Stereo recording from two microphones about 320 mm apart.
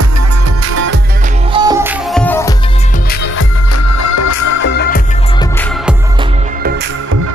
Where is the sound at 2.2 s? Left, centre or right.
Centre.